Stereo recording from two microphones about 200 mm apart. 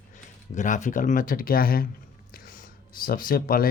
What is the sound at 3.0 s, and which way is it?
Speech, 45° left (ahead or behind).